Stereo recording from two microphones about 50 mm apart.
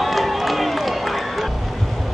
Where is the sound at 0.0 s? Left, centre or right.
Centre.